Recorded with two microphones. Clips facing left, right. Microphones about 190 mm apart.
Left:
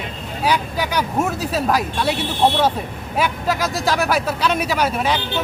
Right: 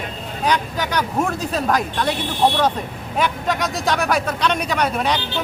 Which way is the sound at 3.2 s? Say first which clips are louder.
Even; 5° left (ahead or behind).